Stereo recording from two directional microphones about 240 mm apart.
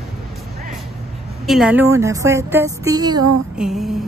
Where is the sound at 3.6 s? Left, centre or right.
Centre.